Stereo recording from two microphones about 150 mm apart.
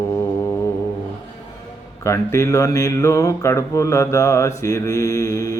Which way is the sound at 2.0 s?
20° left (ahead or behind).